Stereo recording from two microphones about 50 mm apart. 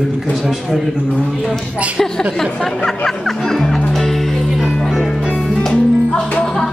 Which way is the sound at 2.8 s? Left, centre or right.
Centre.